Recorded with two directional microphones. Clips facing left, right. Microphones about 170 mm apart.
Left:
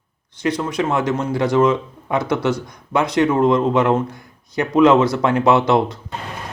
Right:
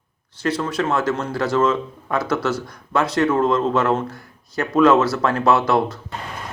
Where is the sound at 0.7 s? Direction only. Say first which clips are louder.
Left 1 dB; 15° left (ahead or behind).